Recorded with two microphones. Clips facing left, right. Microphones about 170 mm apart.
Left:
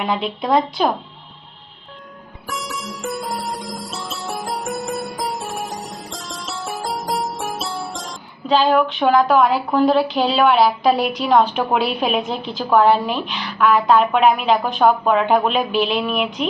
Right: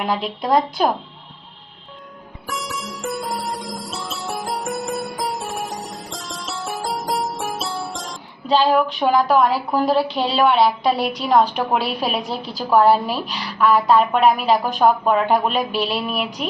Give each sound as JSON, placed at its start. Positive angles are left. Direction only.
{"t": 0.4, "sound": "a woman's voice", "side_deg": 0}
{"t": 2.5, "sound": "music", "side_deg": 0}
{"t": 9.0, "sound": "a woman's voice", "side_deg": 0}
{"t": 16.1, "sound": "female singing", "side_deg": -35}